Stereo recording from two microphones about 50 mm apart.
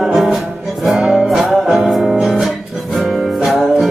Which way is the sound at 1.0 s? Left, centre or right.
Centre.